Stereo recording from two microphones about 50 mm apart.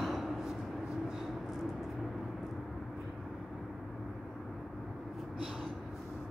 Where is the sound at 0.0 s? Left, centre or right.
Centre.